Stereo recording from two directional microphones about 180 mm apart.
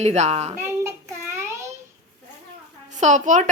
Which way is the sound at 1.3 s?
15° right (ahead or behind).